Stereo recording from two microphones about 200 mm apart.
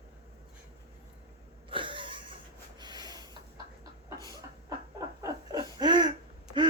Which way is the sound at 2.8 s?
20° right (ahead or behind).